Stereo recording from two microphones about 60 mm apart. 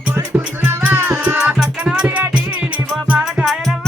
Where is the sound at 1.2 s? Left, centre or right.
Centre.